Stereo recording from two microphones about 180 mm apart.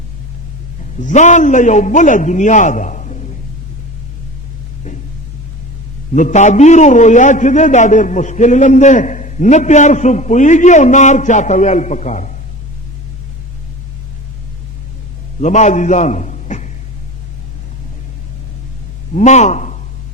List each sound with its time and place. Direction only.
0.9 s a man's voice: 45° left (ahead or behind)
6.1 s a man's voice: 40° left (ahead or behind)
15.4 s a man's voice: 40° left (ahead or behind)
19.1 s speech: 40° left (ahead or behind)